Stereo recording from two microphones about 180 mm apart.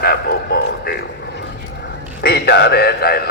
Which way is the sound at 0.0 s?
60° left (ahead or behind).